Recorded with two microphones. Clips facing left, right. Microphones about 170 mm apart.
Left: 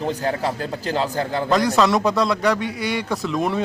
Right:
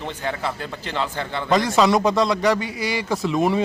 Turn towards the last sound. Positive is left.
turn(degrees=0)  # may be behind; listen again after turning